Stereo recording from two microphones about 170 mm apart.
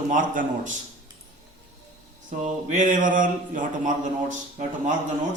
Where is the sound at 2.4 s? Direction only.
45° right (ahead or behind).